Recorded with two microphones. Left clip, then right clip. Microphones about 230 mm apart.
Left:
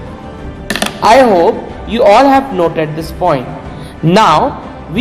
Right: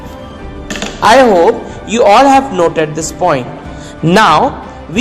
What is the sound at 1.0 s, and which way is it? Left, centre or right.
A man's voice, right.